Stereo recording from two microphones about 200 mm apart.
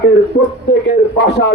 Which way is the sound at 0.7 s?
60° left (ahead or behind).